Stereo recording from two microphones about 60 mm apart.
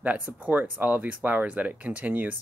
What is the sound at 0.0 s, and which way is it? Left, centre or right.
Speech, right.